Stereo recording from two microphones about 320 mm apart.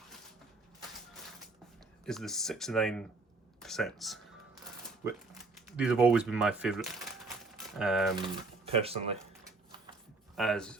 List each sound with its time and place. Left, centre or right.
2.0 s speech: centre
5.6 s speech: centre
7.3 s crumpling: centre
8.1 s speech: centre
10.3 s speech: centre